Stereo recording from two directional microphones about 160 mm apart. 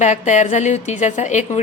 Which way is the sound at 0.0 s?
50° left (ahead or behind).